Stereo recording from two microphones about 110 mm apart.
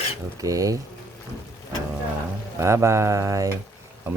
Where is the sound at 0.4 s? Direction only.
30° right (ahead or behind).